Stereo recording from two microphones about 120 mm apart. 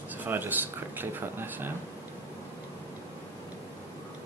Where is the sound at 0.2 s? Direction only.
15° right (ahead or behind).